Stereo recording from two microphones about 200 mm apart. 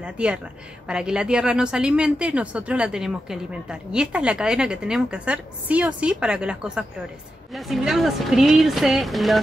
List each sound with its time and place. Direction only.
0.0 s a woman's voice: 5° right (ahead or behind)